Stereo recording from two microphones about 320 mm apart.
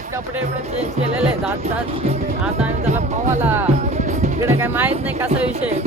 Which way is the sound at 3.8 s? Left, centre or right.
Right.